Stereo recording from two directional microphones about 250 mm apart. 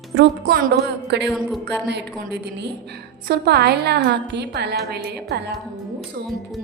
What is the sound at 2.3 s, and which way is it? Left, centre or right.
A woman's voice, right.